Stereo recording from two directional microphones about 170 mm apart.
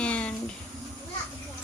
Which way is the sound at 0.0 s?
5° left (ahead or behind).